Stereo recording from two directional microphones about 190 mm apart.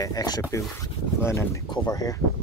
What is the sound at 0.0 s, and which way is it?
Speech, 20° left (ahead or behind).